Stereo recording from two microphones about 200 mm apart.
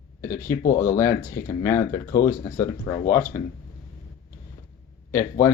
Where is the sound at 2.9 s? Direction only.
20° left (ahead or behind).